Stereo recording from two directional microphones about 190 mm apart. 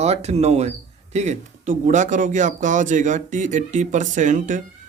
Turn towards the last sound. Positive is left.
turn(degrees=-40)  # may be behind; listen again after turning